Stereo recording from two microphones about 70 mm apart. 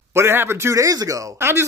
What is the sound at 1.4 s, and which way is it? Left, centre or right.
Speech, right.